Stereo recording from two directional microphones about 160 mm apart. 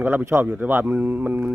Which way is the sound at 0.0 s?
10° right (ahead or behind).